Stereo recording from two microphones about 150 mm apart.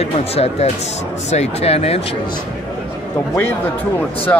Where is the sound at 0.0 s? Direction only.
45° left (ahead or behind).